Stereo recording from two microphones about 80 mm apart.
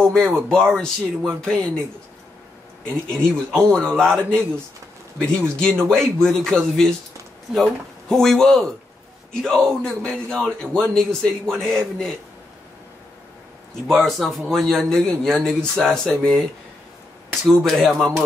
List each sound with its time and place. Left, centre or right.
0.0 s speech: centre
3.5 s a man's voice: centre
13.8 s a man's voice: centre